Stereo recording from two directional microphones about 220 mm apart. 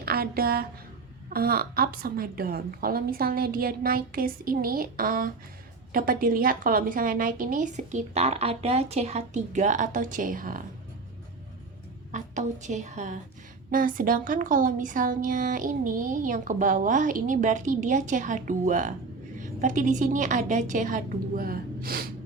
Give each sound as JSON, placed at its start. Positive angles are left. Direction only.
{"t": 0.0, "sound": "a woman's voice", "side_deg": -45}
{"t": 12.1, "sound": "a woman's voice", "side_deg": -35}